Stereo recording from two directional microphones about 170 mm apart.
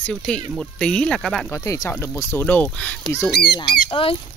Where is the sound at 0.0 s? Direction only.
5° left (ahead or behind).